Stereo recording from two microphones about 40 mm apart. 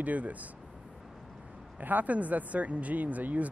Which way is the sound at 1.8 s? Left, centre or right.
Right.